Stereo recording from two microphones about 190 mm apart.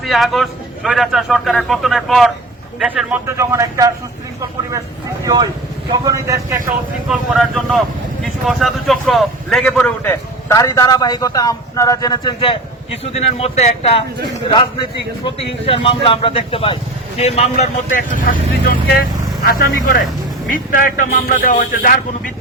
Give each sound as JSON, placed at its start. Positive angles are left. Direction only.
{"t": 0.0, "sound": "a man's voice", "side_deg": 0}
{"t": 5.2, "sound": "a man's voice", "side_deg": -20}
{"t": 7.1, "sound": "a man's voice", "side_deg": 0}
{"t": 15.2, "sound": "a man's voice", "side_deg": 30}